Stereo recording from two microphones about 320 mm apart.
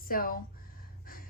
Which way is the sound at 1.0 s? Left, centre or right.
Left.